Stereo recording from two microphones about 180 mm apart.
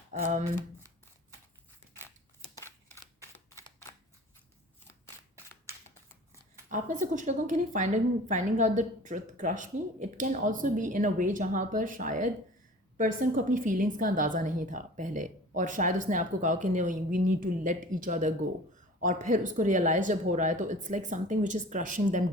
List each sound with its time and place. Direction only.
0.1 s speech: 40° right (ahead or behind)
2.6 s a sound: 15° left (ahead or behind)
3.3 s camera: 15° left (ahead or behind)
6.7 s speech: 45° right (ahead or behind)